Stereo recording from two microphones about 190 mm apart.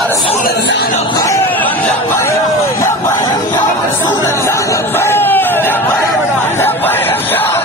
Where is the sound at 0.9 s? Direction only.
25° left (ahead or behind).